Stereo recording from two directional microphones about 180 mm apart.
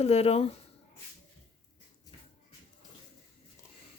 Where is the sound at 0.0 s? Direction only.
35° left (ahead or behind).